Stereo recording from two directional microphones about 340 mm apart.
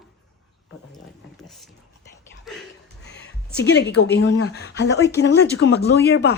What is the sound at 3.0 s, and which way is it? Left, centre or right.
Speech, left.